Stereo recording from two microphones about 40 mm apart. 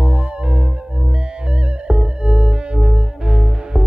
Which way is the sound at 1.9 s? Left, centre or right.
Centre.